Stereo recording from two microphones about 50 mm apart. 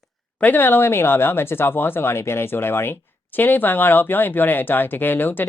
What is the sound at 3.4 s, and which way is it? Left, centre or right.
Speech, left.